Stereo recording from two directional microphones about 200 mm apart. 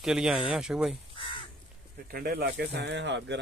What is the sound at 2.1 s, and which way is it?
Speech, 50° right (ahead or behind).